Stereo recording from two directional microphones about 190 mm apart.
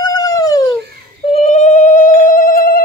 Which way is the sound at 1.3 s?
35° left (ahead or behind).